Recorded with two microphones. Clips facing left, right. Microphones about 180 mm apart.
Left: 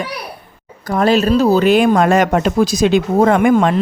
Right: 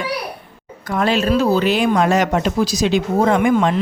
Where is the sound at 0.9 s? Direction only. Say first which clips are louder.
Left 4 dB; 40° left (ahead or behind).